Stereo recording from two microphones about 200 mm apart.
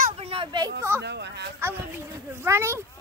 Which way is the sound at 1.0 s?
55° right (ahead or behind).